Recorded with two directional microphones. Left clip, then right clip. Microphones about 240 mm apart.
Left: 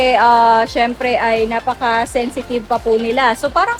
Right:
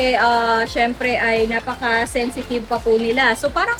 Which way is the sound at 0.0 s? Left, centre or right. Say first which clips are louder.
Left 6 dB; left.